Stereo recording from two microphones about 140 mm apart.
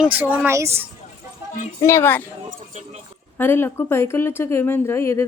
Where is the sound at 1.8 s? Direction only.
15° left (ahead or behind).